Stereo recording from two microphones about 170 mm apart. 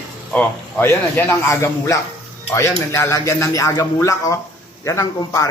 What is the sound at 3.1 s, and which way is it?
A man's voice, 20° left (ahead or behind).